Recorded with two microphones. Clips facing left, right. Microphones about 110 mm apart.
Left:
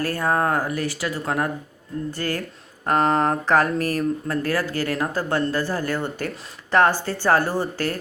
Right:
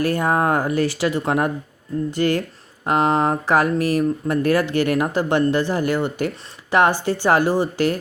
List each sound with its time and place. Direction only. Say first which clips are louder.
0.0 s speech: right 3 dB; 20° right (ahead or behind)